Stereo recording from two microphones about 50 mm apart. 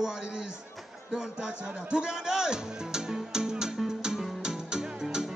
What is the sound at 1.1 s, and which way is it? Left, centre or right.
Music, centre.